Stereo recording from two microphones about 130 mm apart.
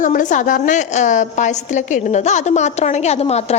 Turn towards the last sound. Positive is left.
turn(degrees=55)  # may be behind; listen again after turning